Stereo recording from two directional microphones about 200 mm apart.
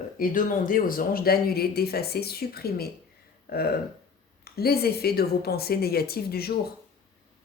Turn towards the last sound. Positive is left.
turn(degrees=50)  # may be behind; listen again after turning